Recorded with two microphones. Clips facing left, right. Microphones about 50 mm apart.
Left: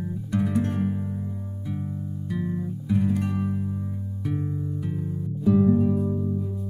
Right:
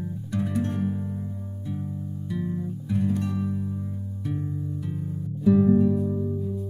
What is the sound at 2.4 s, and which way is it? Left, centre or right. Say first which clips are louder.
Music: left 1 dB; left.